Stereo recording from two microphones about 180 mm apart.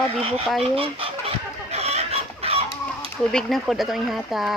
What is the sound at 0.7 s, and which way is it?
Chicken, 30° right (ahead or behind).